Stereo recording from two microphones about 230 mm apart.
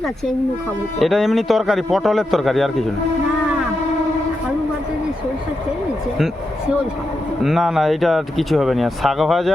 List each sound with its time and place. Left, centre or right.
0.9 s speech: centre
7.4 s speech: centre